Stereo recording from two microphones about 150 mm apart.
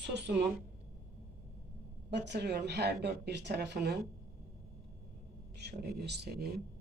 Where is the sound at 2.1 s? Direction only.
90° right.